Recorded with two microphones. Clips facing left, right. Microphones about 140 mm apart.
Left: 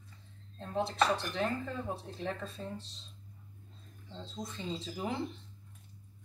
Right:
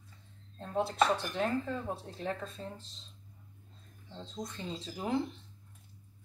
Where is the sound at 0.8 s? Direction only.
Centre (ahead or behind).